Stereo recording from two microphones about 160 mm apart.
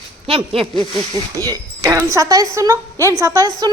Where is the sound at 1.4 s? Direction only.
20° right (ahead or behind).